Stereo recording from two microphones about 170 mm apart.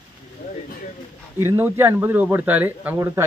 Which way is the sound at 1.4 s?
15° right (ahead or behind).